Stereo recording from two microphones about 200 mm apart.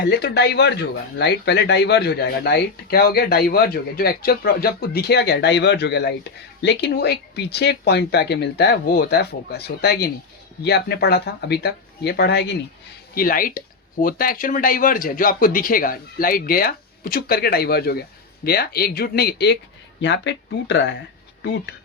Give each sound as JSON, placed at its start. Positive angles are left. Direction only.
{"t": 0.0, "sound": "speech", "side_deg": 55}
{"t": 13.1, "sound": "speech", "side_deg": 45}